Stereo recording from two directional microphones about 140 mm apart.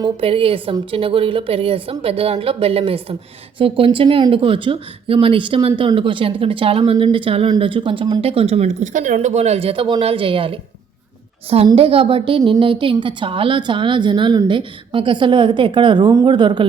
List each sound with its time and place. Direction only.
0.0 s a woman's voice: 40° right (ahead or behind)